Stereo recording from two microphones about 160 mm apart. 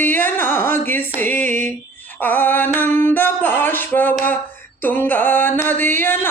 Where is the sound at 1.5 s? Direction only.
50° right (ahead or behind).